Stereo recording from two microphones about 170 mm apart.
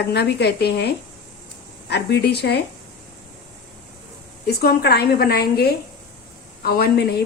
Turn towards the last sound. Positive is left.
turn(degrees=70)  # may be behind; listen again after turning